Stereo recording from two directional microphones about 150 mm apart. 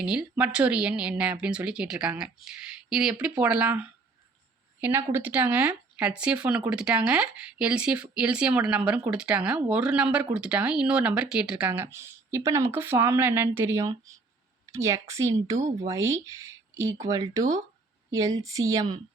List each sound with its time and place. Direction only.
0.0 s speech: 5° right (ahead or behind)
15.5 s speech: 55° right (ahead or behind)
15.9 s speech: 20° right (ahead or behind)